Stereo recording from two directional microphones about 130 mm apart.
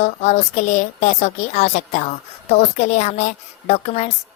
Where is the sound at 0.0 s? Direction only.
65° left (ahead or behind).